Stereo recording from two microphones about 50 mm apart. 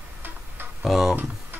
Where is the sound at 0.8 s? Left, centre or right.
Centre.